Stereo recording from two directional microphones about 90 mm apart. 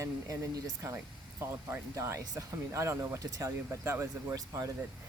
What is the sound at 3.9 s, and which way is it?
Speech, 25° right (ahead or behind).